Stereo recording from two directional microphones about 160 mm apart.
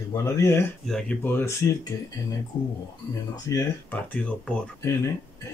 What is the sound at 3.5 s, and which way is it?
Speech, 10° left (ahead or behind).